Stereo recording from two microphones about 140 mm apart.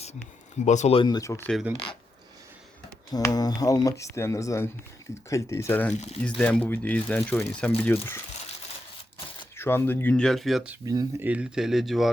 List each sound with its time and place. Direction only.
0.6 s speech: 55° left (ahead or behind)
0.9 s speech: 30° left (ahead or behind)
1.7 s speech: 40° left (ahead or behind)
3.1 s speech: 25° left (ahead or behind)
9.6 s speech: 15° left (ahead or behind); by 12.1 s centre (ahead or behind)